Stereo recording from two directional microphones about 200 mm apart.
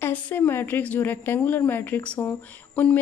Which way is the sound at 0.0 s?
10° left (ahead or behind).